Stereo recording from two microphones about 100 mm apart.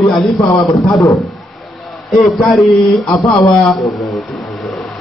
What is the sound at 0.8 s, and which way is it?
Speech, 30° left (ahead or behind).